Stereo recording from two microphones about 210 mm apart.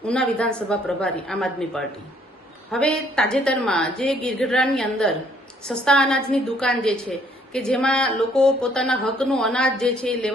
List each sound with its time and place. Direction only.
0.0 s a woman's voice: 5° left (ahead or behind)